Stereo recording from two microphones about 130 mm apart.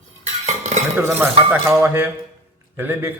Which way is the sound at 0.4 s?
60° right (ahead or behind).